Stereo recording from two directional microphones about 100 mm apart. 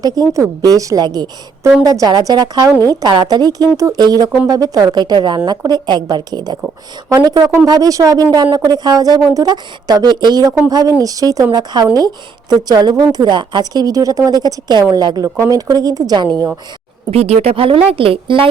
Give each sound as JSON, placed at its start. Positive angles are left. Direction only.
{"t": 0.0, "sound": "speech", "side_deg": -40}
{"t": 17.1, "sound": "a woman's voice", "side_deg": -90}